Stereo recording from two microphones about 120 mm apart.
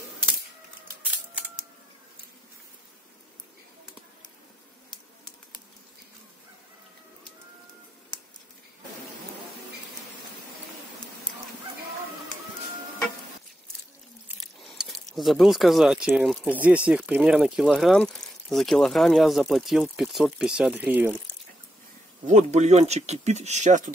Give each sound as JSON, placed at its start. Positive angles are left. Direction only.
{"t": 14.6, "sound": "a sound", "side_deg": 0}
{"t": 16.4, "sound": "speech", "side_deg": -10}
{"t": 22.2, "sound": "speech", "side_deg": -80}